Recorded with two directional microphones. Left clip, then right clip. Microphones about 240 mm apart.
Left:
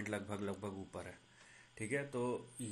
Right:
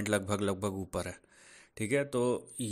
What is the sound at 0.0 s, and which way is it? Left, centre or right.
Speech, right.